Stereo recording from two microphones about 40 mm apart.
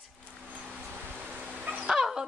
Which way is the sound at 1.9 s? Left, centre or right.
Centre.